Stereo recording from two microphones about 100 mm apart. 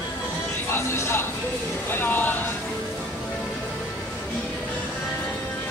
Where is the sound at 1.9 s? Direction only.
20° left (ahead or behind).